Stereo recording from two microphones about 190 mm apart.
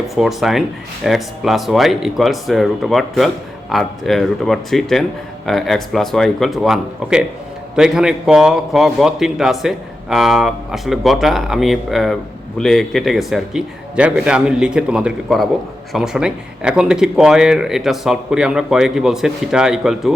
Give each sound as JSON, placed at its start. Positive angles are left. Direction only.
{"t": 0.2, "sound": "a man's voice", "side_deg": 0}